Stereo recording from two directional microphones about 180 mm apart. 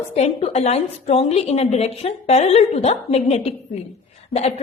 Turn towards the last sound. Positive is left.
turn(degrees=35)  # may be behind; listen again after turning